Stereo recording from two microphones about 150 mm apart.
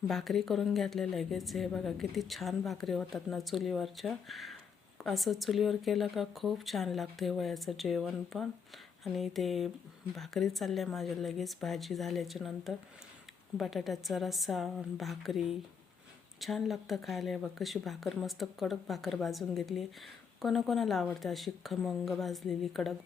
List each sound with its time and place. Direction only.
0.1 s a woman's voice: centre (ahead or behind)